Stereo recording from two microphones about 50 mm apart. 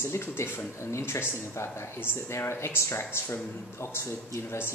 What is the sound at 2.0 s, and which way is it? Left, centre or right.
A man's voice, left.